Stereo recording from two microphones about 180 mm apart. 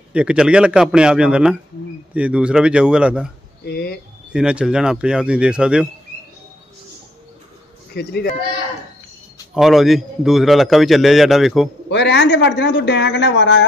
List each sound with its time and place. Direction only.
0.1 s a man's voice: 5° right (ahead or behind)
3.6 s speech: 60° left (ahead or behind)
4.3 s a man's voice: 5° right (ahead or behind)
7.9 s speech: 60° left (ahead or behind)
9.5 s a man's voice: centre (ahead or behind)
11.9 s speech: 75° left (ahead or behind)